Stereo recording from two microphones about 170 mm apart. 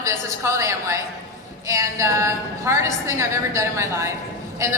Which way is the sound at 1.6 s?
20° right (ahead or behind).